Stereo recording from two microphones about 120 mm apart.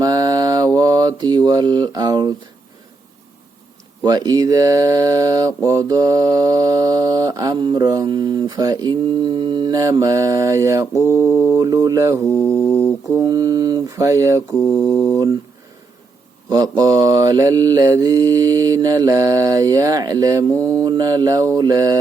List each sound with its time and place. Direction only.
0.0 s mantra: 30° right (ahead or behind)
4.0 s speech: 35° right (ahead or behind)
11.0 s mantra: 20° right (ahead or behind)
12.2 s mantra: 10° left (ahead or behind)
13.1 s mantra: 30° right (ahead or behind)
14.5 s mantra: 5° left (ahead or behind)
16.5 s mantra: 30° right (ahead or behind)